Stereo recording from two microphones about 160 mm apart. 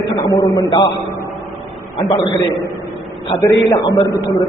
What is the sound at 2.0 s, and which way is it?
Speech, 25° left (ahead or behind).